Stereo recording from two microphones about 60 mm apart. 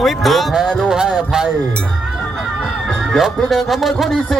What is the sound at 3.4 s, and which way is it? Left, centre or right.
Speech, centre.